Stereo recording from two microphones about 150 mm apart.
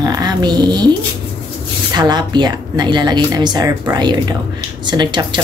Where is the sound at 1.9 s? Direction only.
30° right (ahead or behind).